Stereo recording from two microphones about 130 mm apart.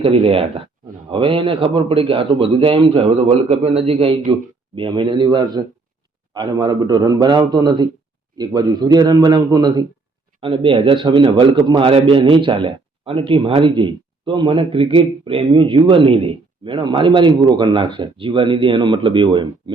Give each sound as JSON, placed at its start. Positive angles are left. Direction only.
{"t": 0.0, "sound": "a man's voice", "side_deg": -45}